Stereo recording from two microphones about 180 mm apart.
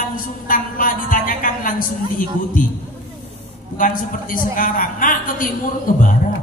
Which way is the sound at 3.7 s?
50° left (ahead or behind).